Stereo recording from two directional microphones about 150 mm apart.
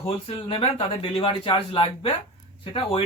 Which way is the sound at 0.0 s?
35° left (ahead or behind).